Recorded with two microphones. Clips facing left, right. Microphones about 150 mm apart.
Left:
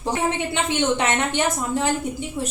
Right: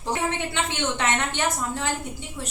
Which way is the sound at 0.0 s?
15° left (ahead or behind).